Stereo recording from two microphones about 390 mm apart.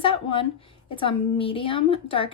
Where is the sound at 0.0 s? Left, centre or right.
Centre.